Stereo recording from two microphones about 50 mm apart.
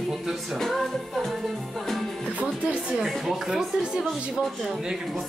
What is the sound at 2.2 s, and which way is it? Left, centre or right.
Music, right.